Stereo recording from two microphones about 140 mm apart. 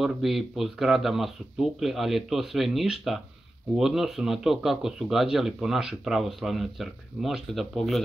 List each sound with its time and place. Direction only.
0.0 s speech: centre (ahead or behind)